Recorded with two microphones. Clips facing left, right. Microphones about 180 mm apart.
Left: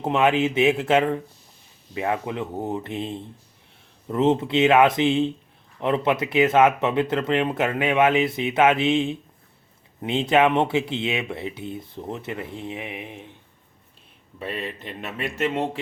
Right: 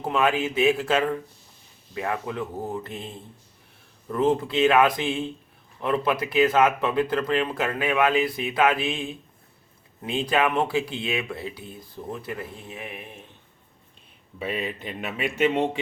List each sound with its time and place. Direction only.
0.0 s speech: 25° left (ahead or behind)
14.3 s speech: centre (ahead or behind)